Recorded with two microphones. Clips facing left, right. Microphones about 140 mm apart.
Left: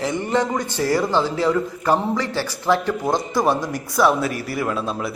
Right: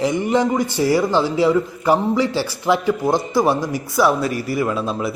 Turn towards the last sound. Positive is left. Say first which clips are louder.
# right 2 dB
turn(degrees=0)  # may be behind; listen again after turning